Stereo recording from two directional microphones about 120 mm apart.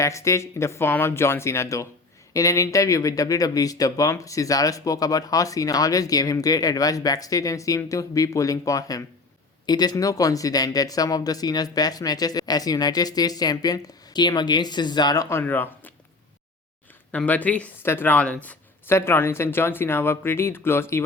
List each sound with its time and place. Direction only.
0.0 s speech: 25° left (ahead or behind)
17.1 s speech: 10° left (ahead or behind)